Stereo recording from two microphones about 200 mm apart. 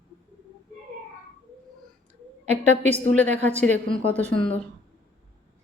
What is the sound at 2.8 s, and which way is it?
Speech, 35° right (ahead or behind).